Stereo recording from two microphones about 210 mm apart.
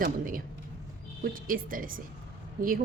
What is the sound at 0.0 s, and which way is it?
A woman's voice, 40° right (ahead or behind).